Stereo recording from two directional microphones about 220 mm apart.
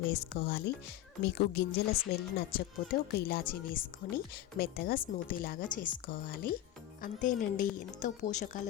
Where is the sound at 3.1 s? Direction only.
45° left (ahead or behind).